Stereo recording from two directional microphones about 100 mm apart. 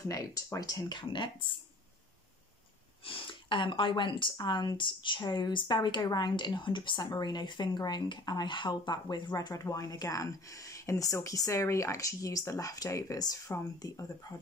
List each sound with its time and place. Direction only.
0.0 s speech: 35° left (ahead or behind); by 1.6 s 55° left (ahead or behind)
3.1 s speech: 60° left (ahead or behind); by 14.0 s 35° left (ahead or behind)